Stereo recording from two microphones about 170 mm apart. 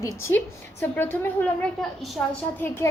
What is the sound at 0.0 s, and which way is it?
A woman's voice, 15° left (ahead or behind).